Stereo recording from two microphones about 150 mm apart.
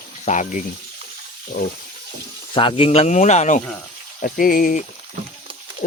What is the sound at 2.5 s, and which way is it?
Speech, 35° left (ahead or behind).